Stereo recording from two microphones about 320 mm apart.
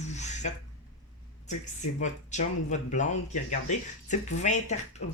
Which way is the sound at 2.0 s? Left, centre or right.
Left.